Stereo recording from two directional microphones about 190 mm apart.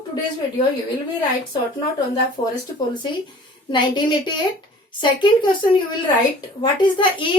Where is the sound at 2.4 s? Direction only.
25° left (ahead or behind).